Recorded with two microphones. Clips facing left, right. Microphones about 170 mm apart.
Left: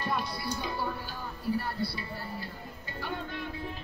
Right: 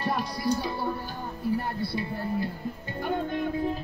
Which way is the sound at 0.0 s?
40° right (ahead or behind).